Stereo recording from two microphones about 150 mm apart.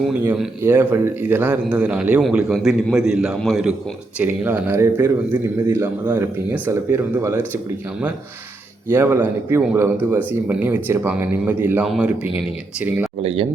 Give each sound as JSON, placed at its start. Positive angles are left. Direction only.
{"t": 0.1, "sound": "a man's voice", "side_deg": -10}
{"t": 8.9, "sound": "speech", "side_deg": -15}
{"t": 13.2, "sound": "speech", "side_deg": -35}